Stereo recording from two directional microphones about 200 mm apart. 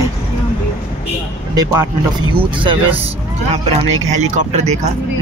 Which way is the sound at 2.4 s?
25° right (ahead or behind).